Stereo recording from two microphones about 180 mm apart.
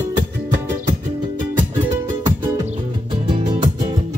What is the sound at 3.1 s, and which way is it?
Music, 30° right (ahead or behind).